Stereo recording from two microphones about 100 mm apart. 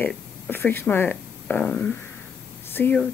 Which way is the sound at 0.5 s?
20° left (ahead or behind).